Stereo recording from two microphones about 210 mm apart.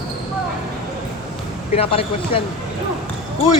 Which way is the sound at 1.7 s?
25° left (ahead or behind).